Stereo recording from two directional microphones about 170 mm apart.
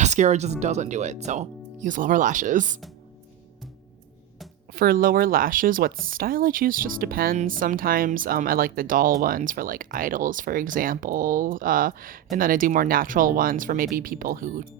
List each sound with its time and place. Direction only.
0.0 s speech: 40° right (ahead or behind)
4.7 s speech: 55° right (ahead or behind)